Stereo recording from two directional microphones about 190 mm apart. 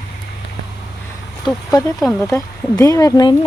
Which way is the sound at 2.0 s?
Centre (ahead or behind).